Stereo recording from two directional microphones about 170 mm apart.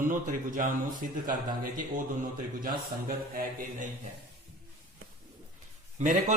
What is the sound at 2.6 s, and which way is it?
Mantra, 60° right (ahead or behind).